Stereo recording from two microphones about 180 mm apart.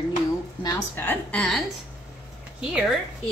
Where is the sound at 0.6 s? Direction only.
20° left (ahead or behind).